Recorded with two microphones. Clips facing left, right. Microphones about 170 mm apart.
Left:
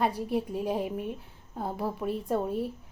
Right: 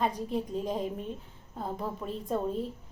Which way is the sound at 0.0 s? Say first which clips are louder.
Left 2 dB; 10° left (ahead or behind).